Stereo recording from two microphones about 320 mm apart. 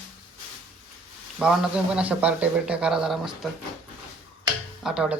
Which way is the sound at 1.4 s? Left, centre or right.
Centre.